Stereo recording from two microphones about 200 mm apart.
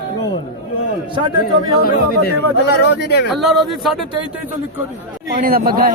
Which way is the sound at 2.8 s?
55° left (ahead or behind).